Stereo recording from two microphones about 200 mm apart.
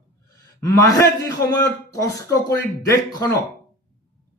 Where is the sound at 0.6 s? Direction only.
15° left (ahead or behind).